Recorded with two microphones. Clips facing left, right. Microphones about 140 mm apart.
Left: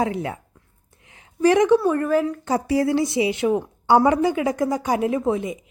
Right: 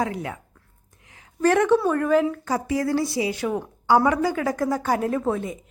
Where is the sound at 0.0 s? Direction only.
25° left (ahead or behind).